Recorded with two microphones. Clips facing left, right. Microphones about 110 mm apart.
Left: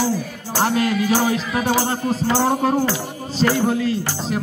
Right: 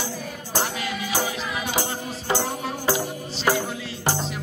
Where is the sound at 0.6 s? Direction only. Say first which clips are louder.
Left 9 dB; 45° left (ahead or behind).